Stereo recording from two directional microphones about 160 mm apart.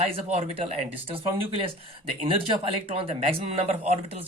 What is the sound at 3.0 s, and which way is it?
Speech, 35° right (ahead or behind).